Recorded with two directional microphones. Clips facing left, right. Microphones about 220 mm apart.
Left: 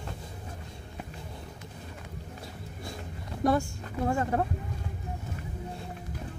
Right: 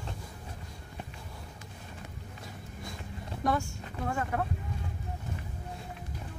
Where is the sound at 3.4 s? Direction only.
35° left (ahead or behind).